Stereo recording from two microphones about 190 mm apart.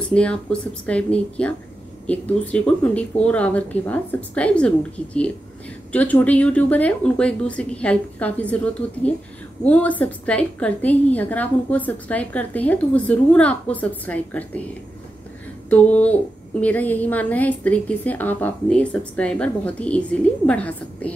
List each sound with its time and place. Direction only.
0.0 s a woman's voice: 5° left (ahead or behind)
15.7 s a woman's voice: 5° left (ahead or behind)